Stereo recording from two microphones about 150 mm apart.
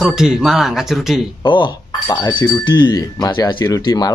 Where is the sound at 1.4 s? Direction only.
30° left (ahead or behind).